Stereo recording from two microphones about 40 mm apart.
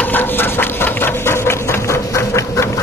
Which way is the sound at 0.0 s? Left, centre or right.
Left.